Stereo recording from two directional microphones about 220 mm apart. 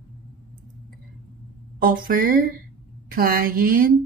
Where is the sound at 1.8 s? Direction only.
40° right (ahead or behind).